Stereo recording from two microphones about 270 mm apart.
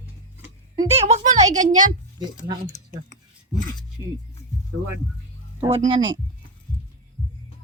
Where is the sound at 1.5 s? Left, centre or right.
Right.